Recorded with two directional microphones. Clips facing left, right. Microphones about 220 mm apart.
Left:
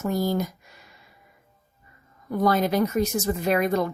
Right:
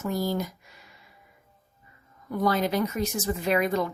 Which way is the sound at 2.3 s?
45° left (ahead or behind).